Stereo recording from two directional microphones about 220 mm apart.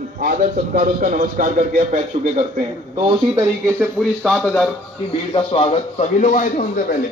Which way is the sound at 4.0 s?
Centre (ahead or behind).